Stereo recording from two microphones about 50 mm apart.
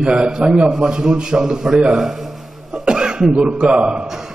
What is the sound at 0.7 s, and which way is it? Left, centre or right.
A man's voice, centre.